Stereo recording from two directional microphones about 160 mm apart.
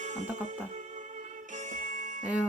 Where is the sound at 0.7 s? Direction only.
50° right (ahead or behind).